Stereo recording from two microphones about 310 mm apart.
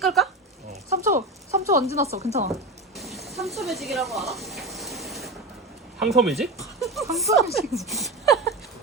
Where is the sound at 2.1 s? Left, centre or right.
Right.